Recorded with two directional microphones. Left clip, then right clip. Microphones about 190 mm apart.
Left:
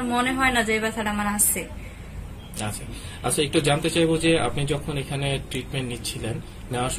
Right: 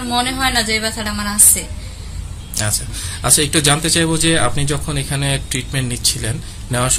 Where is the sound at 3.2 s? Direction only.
35° right (ahead or behind).